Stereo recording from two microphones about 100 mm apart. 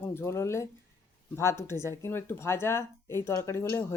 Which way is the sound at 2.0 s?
25° left (ahead or behind).